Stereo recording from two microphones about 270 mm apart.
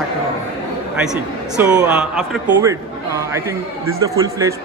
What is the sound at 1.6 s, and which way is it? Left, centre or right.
A man's voice, centre.